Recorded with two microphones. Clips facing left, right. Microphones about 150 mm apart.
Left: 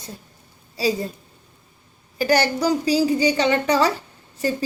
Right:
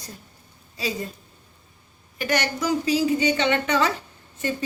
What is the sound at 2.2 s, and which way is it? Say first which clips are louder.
A woman's voice: left 6 dB; 35° left (ahead or behind).